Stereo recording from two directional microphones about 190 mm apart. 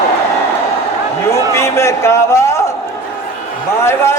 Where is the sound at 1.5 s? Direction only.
15° left (ahead or behind).